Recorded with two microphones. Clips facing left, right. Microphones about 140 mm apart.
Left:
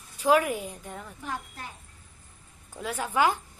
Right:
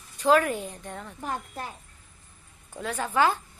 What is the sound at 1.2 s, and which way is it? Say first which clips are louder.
Speech: right 5 dB; 45° right (ahead or behind).